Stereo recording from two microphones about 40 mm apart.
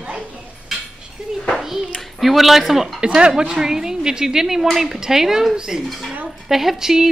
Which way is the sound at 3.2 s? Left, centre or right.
Right.